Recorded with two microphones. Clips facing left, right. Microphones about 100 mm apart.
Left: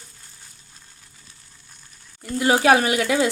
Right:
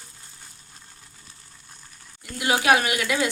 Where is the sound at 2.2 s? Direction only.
35° left (ahead or behind).